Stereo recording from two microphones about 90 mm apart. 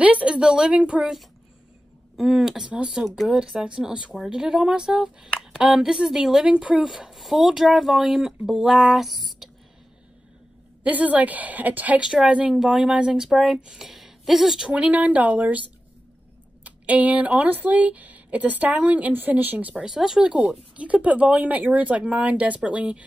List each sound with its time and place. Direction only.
0.0 s a woman's voice: 15° right (ahead or behind)
10.8 s a woman's voice: 15° right (ahead or behind)
14.7 s a woman's voice: 15° right (ahead or behind)
16.6 s a woman's voice: 15° right (ahead or behind)
19.7 s a woman's voice: 5° right (ahead or behind)